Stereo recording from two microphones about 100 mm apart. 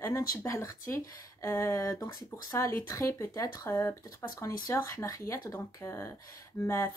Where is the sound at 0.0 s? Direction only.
25° left (ahead or behind).